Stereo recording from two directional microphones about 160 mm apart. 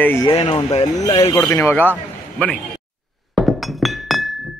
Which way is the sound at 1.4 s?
15° left (ahead or behind).